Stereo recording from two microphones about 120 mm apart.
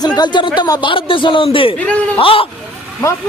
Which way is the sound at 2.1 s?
50° left (ahead or behind).